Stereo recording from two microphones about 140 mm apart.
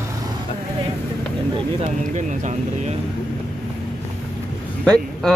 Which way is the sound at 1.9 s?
60° right (ahead or behind).